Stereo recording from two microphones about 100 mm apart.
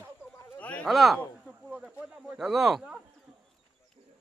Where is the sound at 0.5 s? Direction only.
15° left (ahead or behind).